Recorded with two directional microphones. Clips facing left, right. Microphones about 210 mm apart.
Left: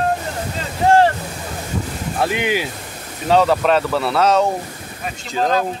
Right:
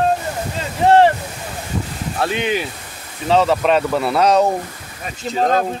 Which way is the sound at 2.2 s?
10° left (ahead or behind).